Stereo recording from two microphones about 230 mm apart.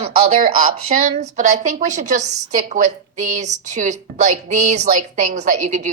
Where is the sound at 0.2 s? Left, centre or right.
Right.